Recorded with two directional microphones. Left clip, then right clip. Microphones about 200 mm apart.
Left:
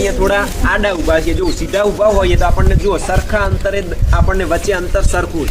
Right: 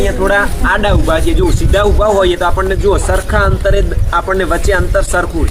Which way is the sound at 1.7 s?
15° right (ahead or behind).